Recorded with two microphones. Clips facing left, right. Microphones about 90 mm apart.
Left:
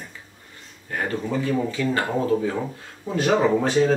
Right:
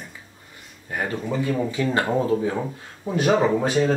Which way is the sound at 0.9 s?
15° right (ahead or behind).